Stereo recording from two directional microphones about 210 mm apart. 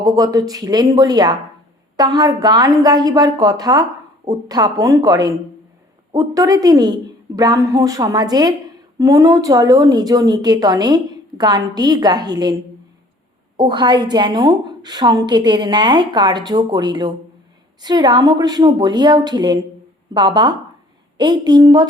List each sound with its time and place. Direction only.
0.0 s a woman's voice: 15° right (ahead or behind)
13.6 s speech: 20° right (ahead or behind)